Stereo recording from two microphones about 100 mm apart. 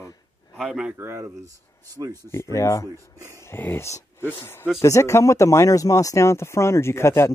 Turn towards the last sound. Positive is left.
turn(degrees=25)  # may be behind; listen again after turning